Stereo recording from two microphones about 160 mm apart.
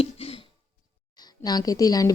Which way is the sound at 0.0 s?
35° left (ahead or behind).